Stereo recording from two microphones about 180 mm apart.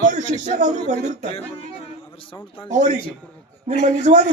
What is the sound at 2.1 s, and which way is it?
Speech, 30° left (ahead or behind).